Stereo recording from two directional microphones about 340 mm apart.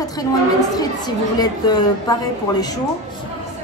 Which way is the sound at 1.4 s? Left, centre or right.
Centre.